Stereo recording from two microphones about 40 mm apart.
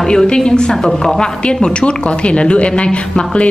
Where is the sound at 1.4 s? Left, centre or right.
Left.